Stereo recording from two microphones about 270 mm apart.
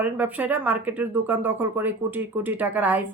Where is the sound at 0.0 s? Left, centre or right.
Centre.